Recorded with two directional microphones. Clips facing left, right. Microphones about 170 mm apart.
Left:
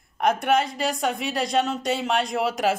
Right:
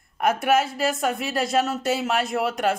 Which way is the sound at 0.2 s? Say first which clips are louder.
Right 1 dB; 5° right (ahead or behind).